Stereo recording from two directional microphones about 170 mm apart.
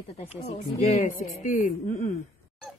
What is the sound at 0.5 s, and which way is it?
Speech, 45° left (ahead or behind).